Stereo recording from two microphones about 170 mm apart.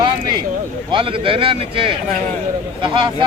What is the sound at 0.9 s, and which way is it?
Speech, 30° right (ahead or behind).